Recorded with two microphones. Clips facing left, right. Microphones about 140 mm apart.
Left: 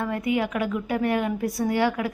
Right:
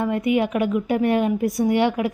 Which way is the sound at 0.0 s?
20° right (ahead or behind).